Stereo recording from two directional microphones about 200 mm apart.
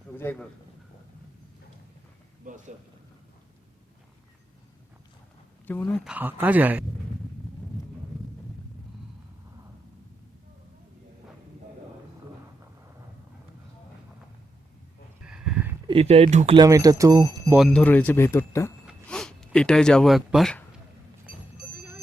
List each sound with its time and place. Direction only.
0.2 s speech: 10° left (ahead or behind)
2.4 s speech: 40° right (ahead or behind)
5.6 s speech: 10° left (ahead or behind)
6.1 s speech: 10° right (ahead or behind)
15.3 s a sound: 5° right (ahead or behind)
15.9 s speech: 30° right (ahead or behind)
16.6 s speech: 15° right (ahead or behind)
17.6 s speech: 5° left (ahead or behind)